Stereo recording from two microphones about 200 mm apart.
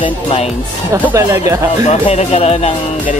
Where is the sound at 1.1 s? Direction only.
15° right (ahead or behind).